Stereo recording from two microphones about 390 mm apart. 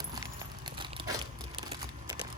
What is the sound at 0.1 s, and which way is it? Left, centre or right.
Crumpling, centre.